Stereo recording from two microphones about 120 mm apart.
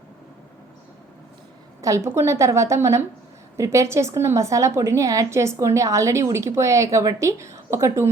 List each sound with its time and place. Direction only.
1.8 s a woman's voice: 25° right (ahead or behind)